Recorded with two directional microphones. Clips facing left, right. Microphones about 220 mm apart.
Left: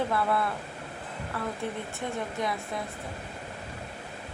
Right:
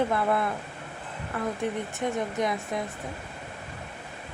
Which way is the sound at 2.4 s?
20° right (ahead or behind).